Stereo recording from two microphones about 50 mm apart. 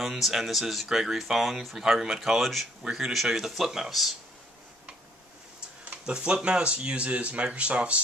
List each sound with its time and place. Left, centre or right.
0.0 s speech: centre
5.9 s speech: centre